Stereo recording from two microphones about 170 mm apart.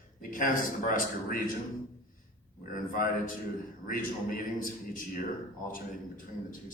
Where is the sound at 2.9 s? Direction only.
55° left (ahead or behind).